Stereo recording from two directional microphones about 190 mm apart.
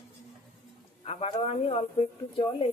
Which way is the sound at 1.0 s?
35° left (ahead or behind).